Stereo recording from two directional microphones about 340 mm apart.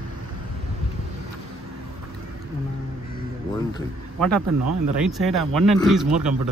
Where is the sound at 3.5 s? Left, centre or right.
Centre.